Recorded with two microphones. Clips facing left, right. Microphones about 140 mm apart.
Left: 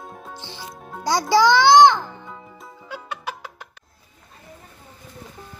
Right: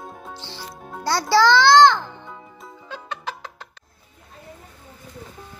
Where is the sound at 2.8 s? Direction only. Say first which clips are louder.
Even; 10° left (ahead or behind).